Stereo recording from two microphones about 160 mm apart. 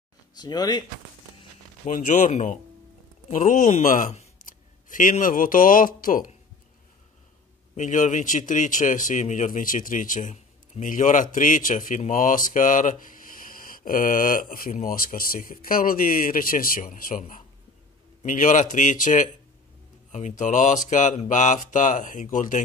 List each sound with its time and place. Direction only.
0.3 s speech: 25° left (ahead or behind)
1.9 s speech: 50° left (ahead or behind)
7.7 s a man's voice: 50° left (ahead or behind)